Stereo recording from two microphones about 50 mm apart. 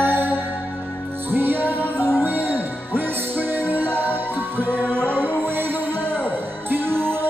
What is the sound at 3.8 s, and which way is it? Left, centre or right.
Music, left.